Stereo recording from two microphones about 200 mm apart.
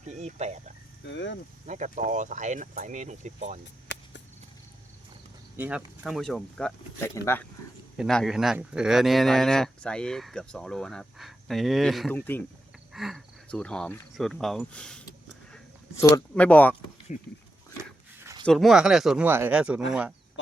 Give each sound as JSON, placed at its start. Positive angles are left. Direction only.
{"t": 0.1, "sound": "speech", "side_deg": -35}
{"t": 1.0, "sound": "speech", "side_deg": 65}
{"t": 1.6, "sound": "speech", "side_deg": -40}
{"t": 5.5, "sound": "speech", "side_deg": -10}
{"t": 7.9, "sound": "speech", "side_deg": 0}
{"t": 12.9, "sound": "speech", "side_deg": 0}
{"t": 17.1, "sound": "speech", "side_deg": 40}
{"t": 18.2, "sound": "a sound", "side_deg": -15}
{"t": 18.4, "sound": "speech", "side_deg": 0}